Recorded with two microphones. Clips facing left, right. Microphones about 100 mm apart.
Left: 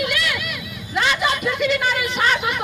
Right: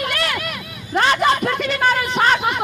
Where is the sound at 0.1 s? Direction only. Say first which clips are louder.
Right 1 dB; 45° right (ahead or behind).